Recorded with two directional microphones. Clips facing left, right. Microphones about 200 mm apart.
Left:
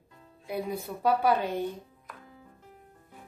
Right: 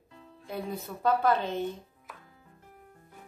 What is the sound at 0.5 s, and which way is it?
A woman's voice, 10° left (ahead or behind).